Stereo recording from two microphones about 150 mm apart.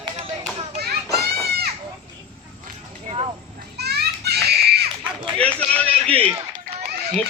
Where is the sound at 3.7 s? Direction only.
90° right.